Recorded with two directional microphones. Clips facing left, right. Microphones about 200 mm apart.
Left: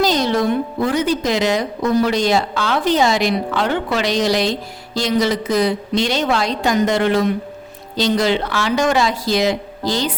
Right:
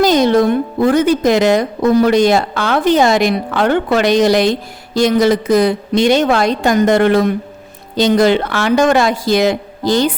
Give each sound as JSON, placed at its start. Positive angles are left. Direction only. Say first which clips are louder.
{"t": 0.0, "sound": "a woman's voice", "louder": "right 6 dB", "side_deg": -55}